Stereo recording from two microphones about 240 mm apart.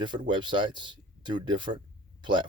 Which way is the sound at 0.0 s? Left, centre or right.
Centre.